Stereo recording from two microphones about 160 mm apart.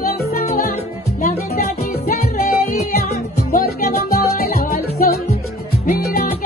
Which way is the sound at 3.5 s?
65° left (ahead or behind).